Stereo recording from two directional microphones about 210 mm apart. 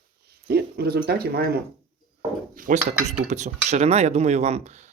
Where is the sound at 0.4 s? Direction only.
50° right (ahead or behind).